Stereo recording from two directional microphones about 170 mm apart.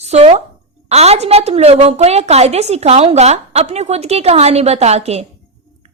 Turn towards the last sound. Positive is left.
turn(degrees=-40)  # may be behind; listen again after turning